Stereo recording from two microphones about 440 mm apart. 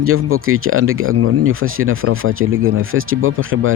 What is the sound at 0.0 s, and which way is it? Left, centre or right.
Speech, right.